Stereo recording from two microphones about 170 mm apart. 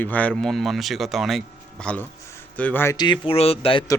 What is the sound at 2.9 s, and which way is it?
Speech, 25° left (ahead or behind).